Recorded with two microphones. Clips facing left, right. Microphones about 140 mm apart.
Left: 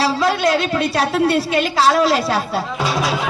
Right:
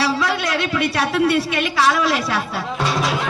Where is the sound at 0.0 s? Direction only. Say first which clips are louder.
Left 4 dB; 25° left (ahead or behind).